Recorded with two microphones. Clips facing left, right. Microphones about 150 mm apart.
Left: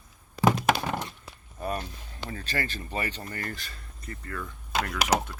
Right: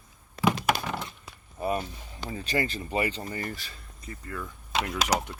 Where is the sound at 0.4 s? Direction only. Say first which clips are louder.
Left 2 dB; 45° left (ahead or behind).